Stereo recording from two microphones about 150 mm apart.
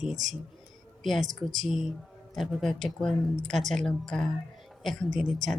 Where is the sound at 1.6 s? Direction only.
Centre (ahead or behind).